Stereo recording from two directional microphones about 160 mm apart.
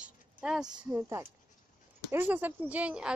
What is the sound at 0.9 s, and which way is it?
Speech, 15° right (ahead or behind).